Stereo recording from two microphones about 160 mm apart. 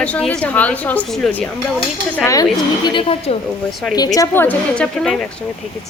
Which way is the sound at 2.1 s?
20° left (ahead or behind).